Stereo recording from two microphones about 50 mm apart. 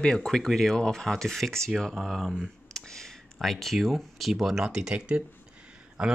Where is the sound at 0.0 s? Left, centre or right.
Centre.